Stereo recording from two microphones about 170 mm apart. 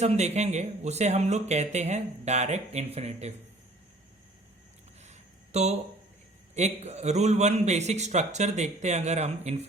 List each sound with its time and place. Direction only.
0.0 s speech: 40° right (ahead or behind)
5.0 s a sound: 40° right (ahead or behind)
6.5 s speech: 40° right (ahead or behind)